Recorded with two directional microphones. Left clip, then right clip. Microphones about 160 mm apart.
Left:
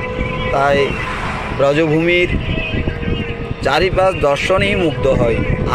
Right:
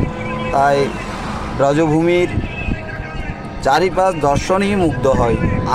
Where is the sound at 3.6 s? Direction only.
20° right (ahead or behind).